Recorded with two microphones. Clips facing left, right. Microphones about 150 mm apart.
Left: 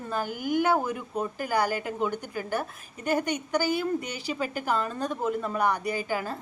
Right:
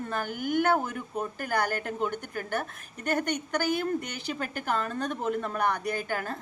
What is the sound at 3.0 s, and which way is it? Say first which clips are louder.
Speech: left 2 dB; 10° left (ahead or behind).